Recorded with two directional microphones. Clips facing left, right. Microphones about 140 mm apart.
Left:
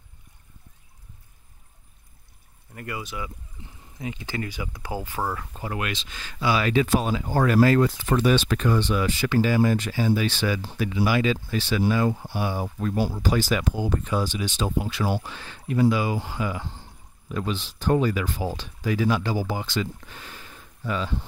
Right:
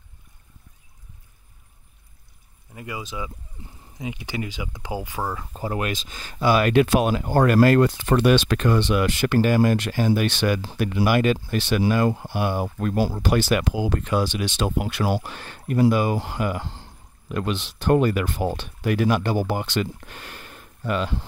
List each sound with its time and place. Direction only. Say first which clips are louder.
2.7 s speech: right 1 dB; 15° right (ahead or behind)
5.5 s speech: right 4 dB; 35° right (ahead or behind)
6.4 s speech: right 4 dB; 55° right (ahead or behind)